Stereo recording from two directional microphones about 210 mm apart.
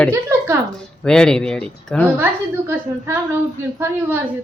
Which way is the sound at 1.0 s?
5° left (ahead or behind).